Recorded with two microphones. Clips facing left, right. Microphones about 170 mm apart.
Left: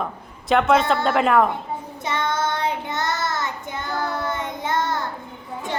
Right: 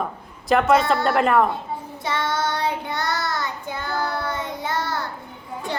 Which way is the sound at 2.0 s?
20° left (ahead or behind).